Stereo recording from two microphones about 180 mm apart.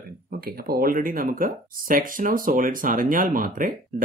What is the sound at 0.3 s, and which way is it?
Speech, 55° right (ahead or behind).